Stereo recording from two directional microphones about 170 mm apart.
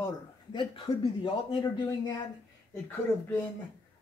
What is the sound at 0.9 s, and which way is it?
Speech, 40° left (ahead or behind).